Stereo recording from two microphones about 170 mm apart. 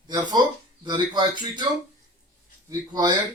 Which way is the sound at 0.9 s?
25° right (ahead or behind).